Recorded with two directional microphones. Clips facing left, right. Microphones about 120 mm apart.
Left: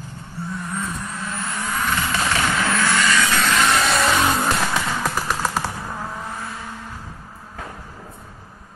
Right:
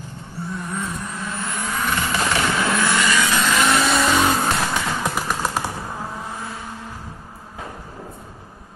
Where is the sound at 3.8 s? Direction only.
Centre (ahead or behind).